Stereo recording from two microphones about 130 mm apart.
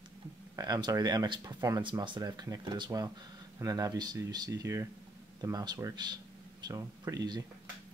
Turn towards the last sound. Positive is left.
turn(degrees=-30)  # may be behind; listen again after turning